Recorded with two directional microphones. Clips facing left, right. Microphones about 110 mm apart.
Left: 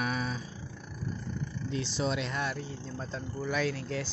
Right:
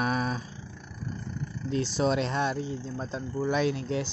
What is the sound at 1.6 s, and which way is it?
Speech, 45° right (ahead or behind).